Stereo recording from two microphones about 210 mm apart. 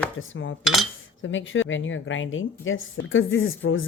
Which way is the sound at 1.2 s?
65° left (ahead or behind).